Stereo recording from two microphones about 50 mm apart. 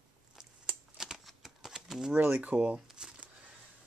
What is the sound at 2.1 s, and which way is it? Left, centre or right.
Speech, right.